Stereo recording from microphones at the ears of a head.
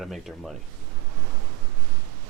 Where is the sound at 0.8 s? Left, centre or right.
Right.